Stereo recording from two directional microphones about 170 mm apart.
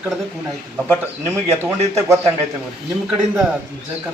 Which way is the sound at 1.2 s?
15° right (ahead or behind).